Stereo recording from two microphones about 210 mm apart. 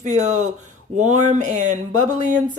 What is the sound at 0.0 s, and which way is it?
A woman's voice, 35° right (ahead or behind).